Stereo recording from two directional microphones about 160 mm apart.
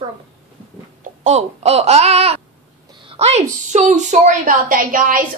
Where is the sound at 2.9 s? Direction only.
35° right (ahead or behind).